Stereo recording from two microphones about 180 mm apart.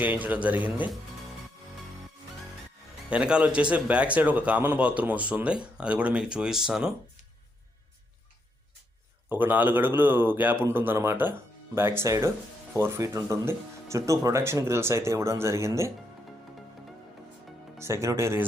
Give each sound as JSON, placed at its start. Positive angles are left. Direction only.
{"t": 0.0, "sound": "a man's voice", "side_deg": -10}
{"t": 3.1, "sound": "a man's voice", "side_deg": -5}
{"t": 9.3, "sound": "a man's voice", "side_deg": -10}
{"t": 17.7, "sound": "a man's voice", "side_deg": -15}